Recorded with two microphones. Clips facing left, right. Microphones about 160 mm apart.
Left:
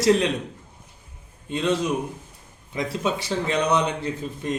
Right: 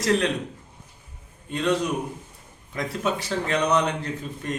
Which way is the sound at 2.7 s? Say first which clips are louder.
Left 1 dB; 15° left (ahead or behind).